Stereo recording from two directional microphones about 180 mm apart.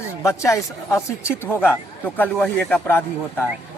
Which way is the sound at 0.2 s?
15° left (ahead or behind).